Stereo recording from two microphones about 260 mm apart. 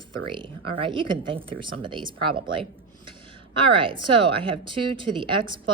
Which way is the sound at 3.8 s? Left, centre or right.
Centre.